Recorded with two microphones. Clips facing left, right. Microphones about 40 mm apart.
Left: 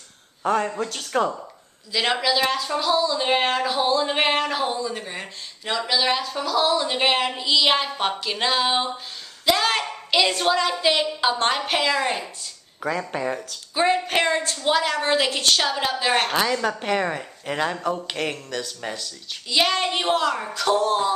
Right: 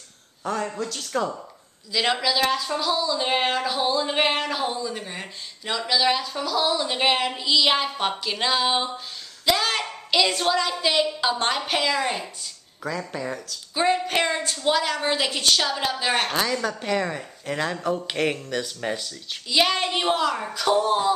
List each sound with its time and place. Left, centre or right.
0.4 s a man's voice: left
1.9 s a woman's voice: centre
12.8 s speech: left
13.7 s speech: centre
17.6 s speech: centre
18.0 s speech: centre
19.5 s speech: centre